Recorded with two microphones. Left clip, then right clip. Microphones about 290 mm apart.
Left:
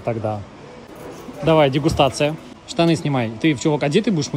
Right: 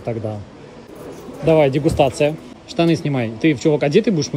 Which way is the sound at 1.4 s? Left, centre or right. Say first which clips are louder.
Right 1 dB; centre.